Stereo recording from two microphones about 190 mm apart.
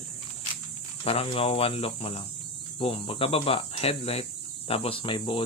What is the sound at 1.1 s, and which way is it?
Speech, 30° left (ahead or behind).